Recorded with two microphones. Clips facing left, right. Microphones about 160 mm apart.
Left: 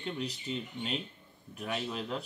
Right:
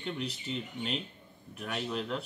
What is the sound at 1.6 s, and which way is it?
Speech, 5° left (ahead or behind).